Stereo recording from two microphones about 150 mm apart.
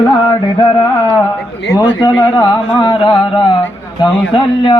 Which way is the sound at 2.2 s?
30° left (ahead or behind).